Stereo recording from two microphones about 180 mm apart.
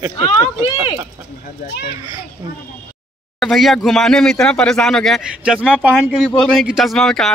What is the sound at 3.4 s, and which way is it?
A man's voice, centre (ahead or behind).